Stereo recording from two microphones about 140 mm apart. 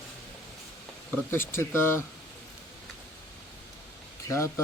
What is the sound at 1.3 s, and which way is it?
Speech, 15° left (ahead or behind).